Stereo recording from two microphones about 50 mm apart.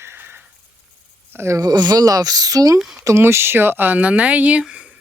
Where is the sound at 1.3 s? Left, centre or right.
Right.